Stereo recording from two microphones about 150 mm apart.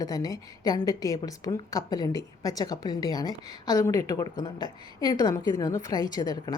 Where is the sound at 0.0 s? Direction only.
25° left (ahead or behind).